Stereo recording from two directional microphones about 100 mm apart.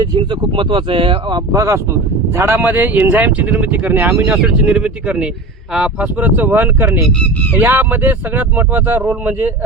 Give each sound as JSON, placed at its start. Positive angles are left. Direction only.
{"t": 0.0, "sound": "speech", "side_deg": -55}
{"t": 1.5, "sound": "speech", "side_deg": -30}